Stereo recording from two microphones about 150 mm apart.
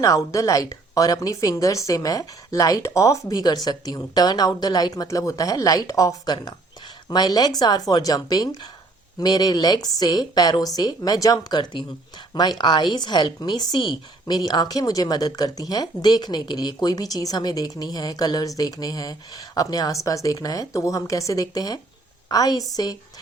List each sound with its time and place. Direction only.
0.0 s a woman's voice: 20° left (ahead or behind)